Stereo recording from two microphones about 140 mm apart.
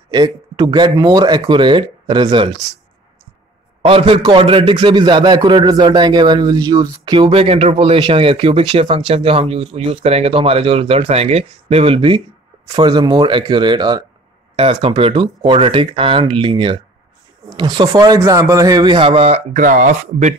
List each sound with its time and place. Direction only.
0.1 s speech: 30° right (ahead or behind)
3.8 s speech: 40° right (ahead or behind)
14.6 s speech: 40° right (ahead or behind)
19.6 s speech: 70° right (ahead or behind)